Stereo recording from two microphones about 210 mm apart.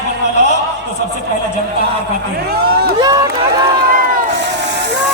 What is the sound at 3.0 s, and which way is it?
Run, 20° right (ahead or behind).